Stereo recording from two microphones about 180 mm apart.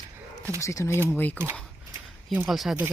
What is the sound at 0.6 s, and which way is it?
Speech, 15° left (ahead or behind).